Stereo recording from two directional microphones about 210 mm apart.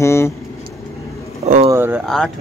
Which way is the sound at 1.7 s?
10° right (ahead or behind).